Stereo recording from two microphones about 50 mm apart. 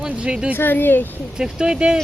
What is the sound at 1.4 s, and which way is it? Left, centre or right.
Speech, centre.